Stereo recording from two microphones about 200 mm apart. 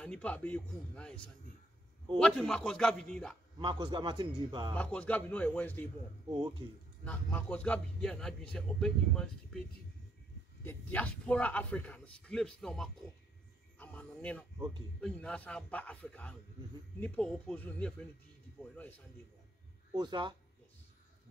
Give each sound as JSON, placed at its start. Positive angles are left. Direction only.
{"t": 0.0, "sound": "speech", "side_deg": 5}
{"t": 2.1, "sound": "speech", "side_deg": 5}
{"t": 3.5, "sound": "a man's voice", "side_deg": -20}
{"t": 4.7, "sound": "a man's voice", "side_deg": 10}
{"t": 7.1, "sound": "speech", "side_deg": 10}
{"t": 10.6, "sound": "a man's voice", "side_deg": 10}
{"t": 19.9, "sound": "a man's voice", "side_deg": -20}